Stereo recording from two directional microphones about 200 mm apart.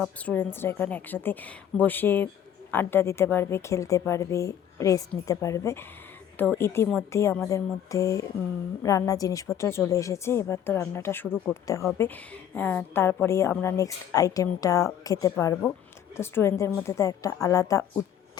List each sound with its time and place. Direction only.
0.0 s speech: 10° left (ahead or behind)